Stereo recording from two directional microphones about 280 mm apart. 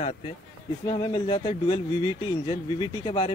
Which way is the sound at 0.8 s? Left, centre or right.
Centre.